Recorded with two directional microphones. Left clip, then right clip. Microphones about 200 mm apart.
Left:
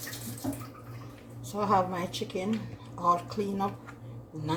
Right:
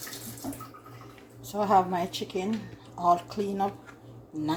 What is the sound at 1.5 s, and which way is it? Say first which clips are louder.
A woman's voice: right 3 dB; 40° right (ahead or behind).